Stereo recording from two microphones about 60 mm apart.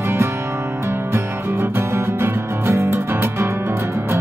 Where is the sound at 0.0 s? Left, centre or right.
Right.